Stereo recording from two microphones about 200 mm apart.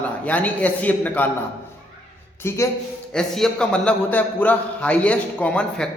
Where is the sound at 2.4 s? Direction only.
10° left (ahead or behind).